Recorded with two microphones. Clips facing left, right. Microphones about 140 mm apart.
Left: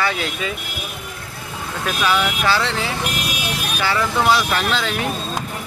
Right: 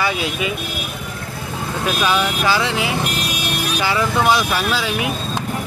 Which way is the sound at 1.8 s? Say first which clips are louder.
Right 1 dB; 15° right (ahead or behind).